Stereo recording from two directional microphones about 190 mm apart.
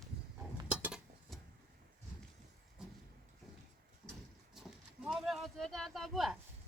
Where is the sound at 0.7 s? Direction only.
5° right (ahead or behind).